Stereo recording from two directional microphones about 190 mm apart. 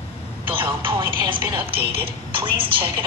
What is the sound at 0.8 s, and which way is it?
Speech, 30° right (ahead or behind).